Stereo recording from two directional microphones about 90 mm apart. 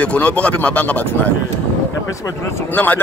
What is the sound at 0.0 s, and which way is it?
Speech, 15° left (ahead or behind).